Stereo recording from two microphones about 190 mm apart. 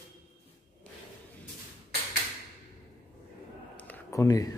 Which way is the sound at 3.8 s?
15° left (ahead or behind).